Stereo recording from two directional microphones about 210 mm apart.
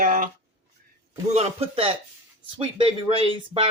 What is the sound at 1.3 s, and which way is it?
Speech, 30° right (ahead or behind).